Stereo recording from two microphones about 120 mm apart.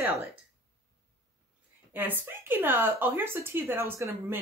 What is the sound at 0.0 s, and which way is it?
Speech, 15° right (ahead or behind).